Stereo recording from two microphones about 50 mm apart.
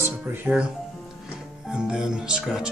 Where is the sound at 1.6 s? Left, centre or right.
Centre.